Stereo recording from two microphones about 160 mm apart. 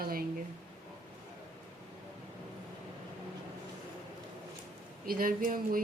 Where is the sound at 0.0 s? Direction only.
65° right (ahead or behind).